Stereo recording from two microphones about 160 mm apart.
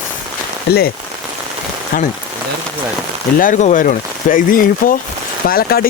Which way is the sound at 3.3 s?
55° left (ahead or behind).